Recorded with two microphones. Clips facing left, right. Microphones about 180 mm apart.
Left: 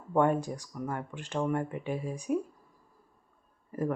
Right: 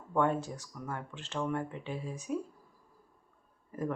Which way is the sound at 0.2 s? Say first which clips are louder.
Left 4 dB; 15° left (ahead or behind).